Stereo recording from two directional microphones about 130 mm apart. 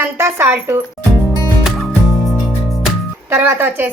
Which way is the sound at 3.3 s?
15° right (ahead or behind).